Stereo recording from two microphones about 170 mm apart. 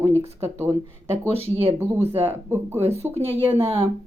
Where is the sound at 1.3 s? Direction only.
35° right (ahead or behind).